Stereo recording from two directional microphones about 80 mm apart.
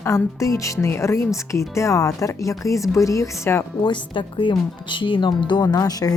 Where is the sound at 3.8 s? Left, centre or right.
Left.